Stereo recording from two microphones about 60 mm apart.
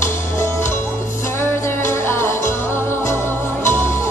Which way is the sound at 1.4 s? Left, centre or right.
Left.